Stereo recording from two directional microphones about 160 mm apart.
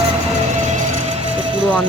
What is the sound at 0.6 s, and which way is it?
Music, 45° right (ahead or behind).